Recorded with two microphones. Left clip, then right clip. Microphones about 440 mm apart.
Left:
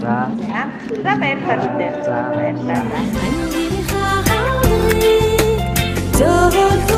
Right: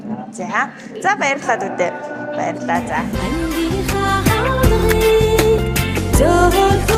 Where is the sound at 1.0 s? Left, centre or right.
Right.